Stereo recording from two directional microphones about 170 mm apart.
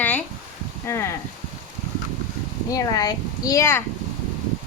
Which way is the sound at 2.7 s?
20° left (ahead or behind).